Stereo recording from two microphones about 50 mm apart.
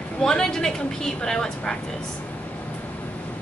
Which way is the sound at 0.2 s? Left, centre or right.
Centre.